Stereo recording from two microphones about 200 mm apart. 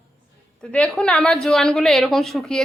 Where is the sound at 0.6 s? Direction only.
5° left (ahead or behind).